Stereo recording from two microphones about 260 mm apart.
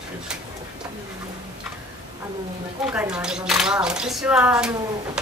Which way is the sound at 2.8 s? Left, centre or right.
Centre.